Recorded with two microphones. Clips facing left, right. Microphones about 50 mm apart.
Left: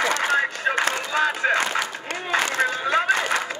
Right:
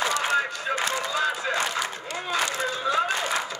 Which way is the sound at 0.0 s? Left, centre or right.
Left.